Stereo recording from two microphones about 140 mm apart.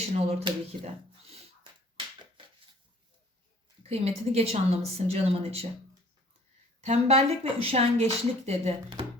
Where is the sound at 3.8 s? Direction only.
45° right (ahead or behind).